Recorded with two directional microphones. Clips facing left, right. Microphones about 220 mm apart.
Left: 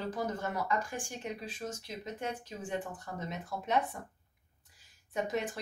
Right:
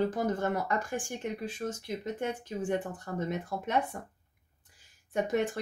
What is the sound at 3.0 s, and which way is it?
Speech, 55° right (ahead or behind).